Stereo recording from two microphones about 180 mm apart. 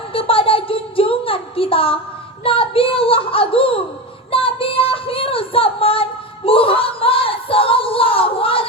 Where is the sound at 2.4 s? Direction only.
30° left (ahead or behind).